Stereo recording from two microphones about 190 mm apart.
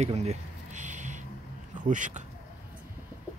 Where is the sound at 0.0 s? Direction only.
35° right (ahead or behind).